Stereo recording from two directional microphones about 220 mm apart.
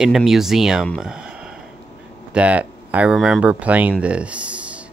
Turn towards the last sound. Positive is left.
turn(degrees=-5)  # may be behind; listen again after turning